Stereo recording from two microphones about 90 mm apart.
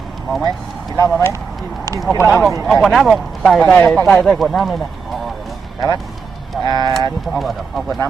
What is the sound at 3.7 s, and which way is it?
Speech, 15° left (ahead or behind).